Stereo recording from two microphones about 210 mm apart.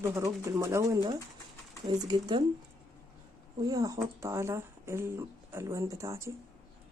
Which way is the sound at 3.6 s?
15° right (ahead or behind).